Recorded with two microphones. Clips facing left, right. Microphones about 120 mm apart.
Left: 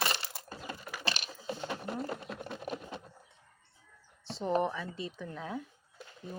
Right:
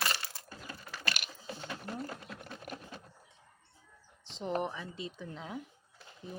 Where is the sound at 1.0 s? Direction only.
25° left (ahead or behind).